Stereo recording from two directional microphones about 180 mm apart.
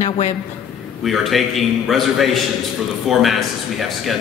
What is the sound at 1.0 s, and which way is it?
A man's voice, centre (ahead or behind).